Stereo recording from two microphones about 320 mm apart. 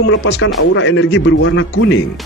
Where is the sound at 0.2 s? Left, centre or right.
Left.